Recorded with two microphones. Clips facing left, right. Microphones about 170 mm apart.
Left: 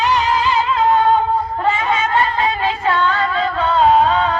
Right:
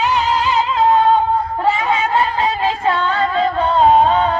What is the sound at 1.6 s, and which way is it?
Snicker, 15° right (ahead or behind).